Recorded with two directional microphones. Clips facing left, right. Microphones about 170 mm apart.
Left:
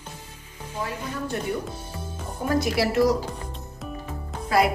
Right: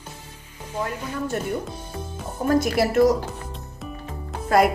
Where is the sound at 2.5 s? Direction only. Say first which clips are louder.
Right 3 dB; 50° right (ahead or behind).